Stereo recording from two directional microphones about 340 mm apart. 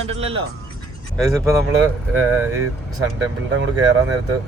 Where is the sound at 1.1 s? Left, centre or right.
Centre.